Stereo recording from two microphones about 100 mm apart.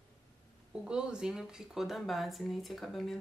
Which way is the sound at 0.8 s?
10° right (ahead or behind).